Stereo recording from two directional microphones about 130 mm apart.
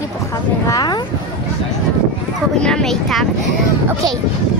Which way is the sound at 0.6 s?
30° left (ahead or behind).